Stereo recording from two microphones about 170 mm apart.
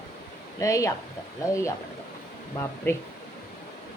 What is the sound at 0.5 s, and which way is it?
Speech, 20° left (ahead or behind).